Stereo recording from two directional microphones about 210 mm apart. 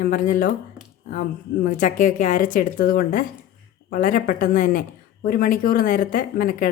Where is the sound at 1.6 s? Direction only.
40° left (ahead or behind).